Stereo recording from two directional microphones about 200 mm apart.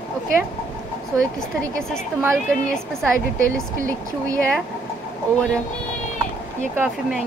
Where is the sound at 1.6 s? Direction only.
5° left (ahead or behind).